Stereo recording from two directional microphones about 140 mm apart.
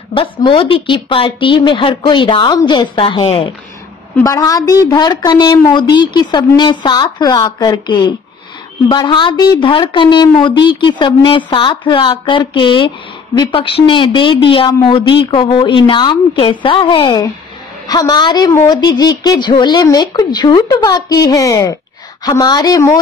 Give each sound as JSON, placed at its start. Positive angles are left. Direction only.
{"t": 0.1, "sound": "a woman's voice", "side_deg": 40}
{"t": 4.2, "sound": "a woman's voice", "side_deg": 25}